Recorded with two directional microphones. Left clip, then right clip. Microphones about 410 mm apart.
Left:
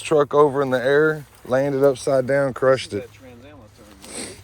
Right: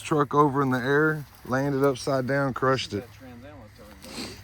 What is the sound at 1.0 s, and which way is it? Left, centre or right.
Speech, left.